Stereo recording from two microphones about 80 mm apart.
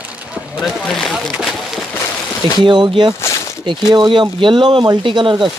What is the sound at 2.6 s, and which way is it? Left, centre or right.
Speech, right.